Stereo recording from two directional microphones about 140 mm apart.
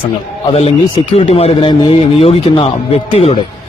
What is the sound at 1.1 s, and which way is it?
A man's voice, 45° left (ahead or behind).